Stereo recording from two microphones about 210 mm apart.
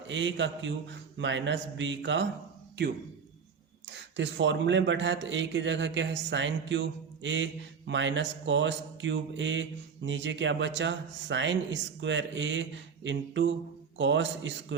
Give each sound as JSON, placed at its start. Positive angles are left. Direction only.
{"t": 0.1, "sound": "a man's voice", "side_deg": -60}
{"t": 3.8, "sound": "a man's voice", "side_deg": -60}